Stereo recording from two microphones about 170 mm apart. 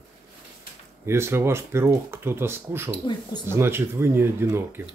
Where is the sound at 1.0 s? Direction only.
15° right (ahead or behind).